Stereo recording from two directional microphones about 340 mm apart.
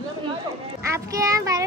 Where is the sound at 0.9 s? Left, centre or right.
Centre.